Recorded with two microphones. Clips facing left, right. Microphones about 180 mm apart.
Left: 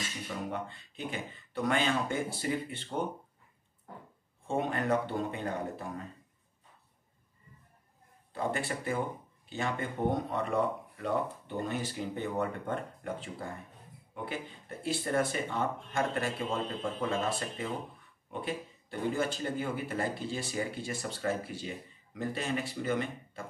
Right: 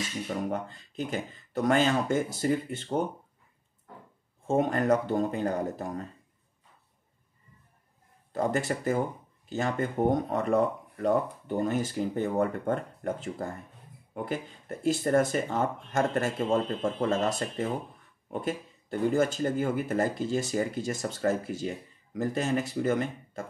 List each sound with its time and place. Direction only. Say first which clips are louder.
0.5 s speech: right 5 dB; 40° right (ahead or behind)
4.5 s speech: right 6 dB; 40° right (ahead or behind)
8.3 s speech: right 6 dB; 45° right (ahead or behind)